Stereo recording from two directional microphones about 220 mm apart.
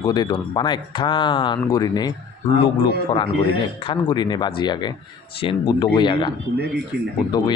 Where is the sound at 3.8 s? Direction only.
20° left (ahead or behind).